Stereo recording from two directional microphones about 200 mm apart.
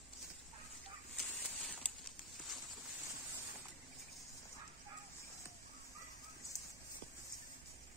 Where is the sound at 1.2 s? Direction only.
Centre (ahead or behind).